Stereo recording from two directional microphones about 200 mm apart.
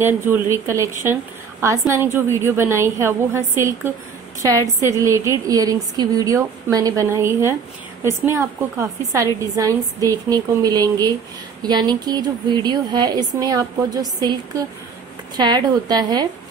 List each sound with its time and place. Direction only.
0.0 s a woman's voice: 10° right (ahead or behind)